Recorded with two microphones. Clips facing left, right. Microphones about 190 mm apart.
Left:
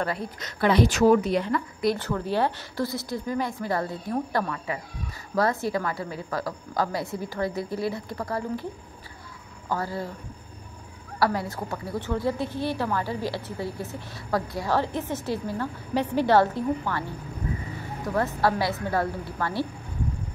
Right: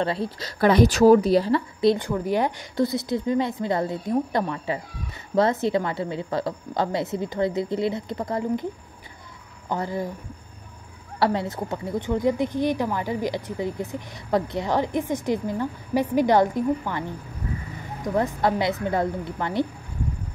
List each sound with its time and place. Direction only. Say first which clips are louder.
0.0 s a woman's voice: right 4 dB; 30° right (ahead or behind)
2.0 s a woman's voice: right 2 dB; 15° right (ahead or behind)
9.7 s a woman's voice: right 2 dB; 20° right (ahead or behind)
11.1 s a woman's voice: right 2 dB; 25° right (ahead or behind)
18.0 s a woman's voice: right 2 dB; 20° right (ahead or behind)